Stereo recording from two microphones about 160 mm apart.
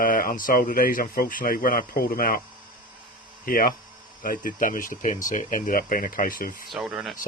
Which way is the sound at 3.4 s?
65° left (ahead or behind).